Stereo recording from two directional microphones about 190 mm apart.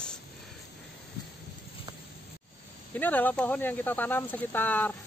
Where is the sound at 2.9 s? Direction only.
10° left (ahead or behind).